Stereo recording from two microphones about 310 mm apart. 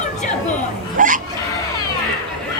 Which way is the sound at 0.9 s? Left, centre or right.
Right.